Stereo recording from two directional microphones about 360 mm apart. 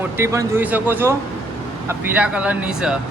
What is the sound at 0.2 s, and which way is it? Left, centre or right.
A man's voice, centre.